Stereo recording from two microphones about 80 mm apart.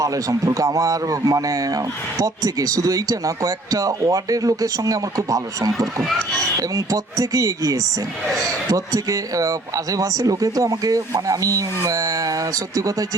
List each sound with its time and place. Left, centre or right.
0.0 s a man's voice: right